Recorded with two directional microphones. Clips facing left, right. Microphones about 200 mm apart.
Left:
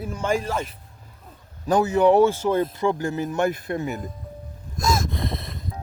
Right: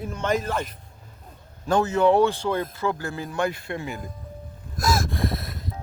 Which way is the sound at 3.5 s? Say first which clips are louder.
Left 5 dB; 40° left (ahead or behind).